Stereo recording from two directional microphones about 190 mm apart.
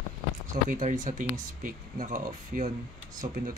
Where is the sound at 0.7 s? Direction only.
40° right (ahead or behind).